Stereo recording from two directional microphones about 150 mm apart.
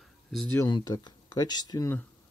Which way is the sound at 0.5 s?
25° left (ahead or behind).